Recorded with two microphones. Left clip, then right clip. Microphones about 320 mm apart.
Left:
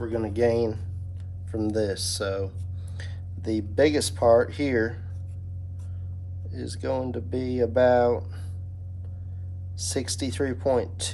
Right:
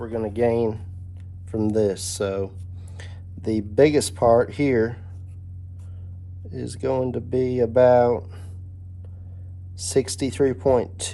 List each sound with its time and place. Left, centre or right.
0.0 s speech: centre
6.5 s speech: right
9.7 s speech: right